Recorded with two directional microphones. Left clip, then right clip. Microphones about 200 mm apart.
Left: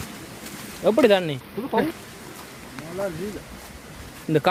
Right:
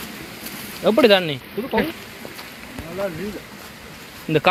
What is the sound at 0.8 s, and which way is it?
Speech, 10° left (ahead or behind).